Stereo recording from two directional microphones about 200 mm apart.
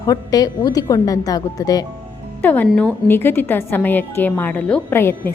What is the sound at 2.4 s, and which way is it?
A woman's voice, 10° left (ahead or behind).